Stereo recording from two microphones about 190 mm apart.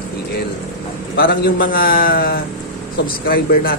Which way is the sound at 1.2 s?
50° left (ahead or behind).